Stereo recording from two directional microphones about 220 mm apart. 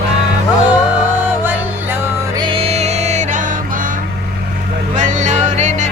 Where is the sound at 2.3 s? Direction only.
25° right (ahead or behind).